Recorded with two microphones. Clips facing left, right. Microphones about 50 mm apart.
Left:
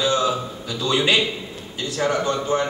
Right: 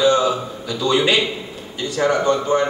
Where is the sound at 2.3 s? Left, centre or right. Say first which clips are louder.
Right 4 dB; centre.